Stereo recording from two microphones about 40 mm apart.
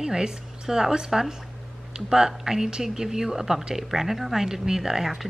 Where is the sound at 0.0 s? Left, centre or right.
Centre.